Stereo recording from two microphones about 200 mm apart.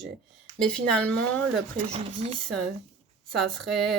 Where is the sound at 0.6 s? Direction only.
5° left (ahead or behind).